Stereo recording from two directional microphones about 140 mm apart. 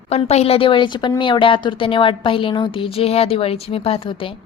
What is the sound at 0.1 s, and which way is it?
A woman's voice, 50° left (ahead or behind).